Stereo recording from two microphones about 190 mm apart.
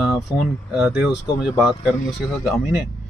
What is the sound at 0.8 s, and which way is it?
Speech, 5° right (ahead or behind).